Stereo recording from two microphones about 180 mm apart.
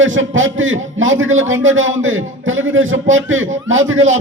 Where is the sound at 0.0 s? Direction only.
90° right.